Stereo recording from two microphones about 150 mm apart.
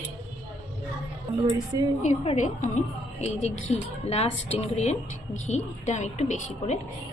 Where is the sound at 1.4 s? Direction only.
25° right (ahead or behind).